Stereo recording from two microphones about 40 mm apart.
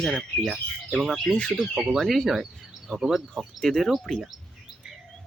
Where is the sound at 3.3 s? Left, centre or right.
Centre.